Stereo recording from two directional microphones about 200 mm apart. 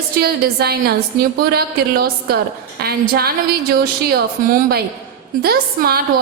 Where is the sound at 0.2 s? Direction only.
50° right (ahead or behind).